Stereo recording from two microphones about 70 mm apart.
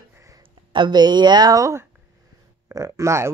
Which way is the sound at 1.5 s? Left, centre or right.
Right.